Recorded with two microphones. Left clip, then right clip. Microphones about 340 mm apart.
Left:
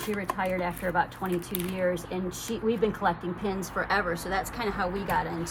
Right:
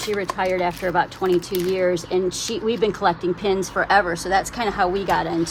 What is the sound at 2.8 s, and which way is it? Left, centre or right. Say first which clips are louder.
Speech: right 10 dB; right.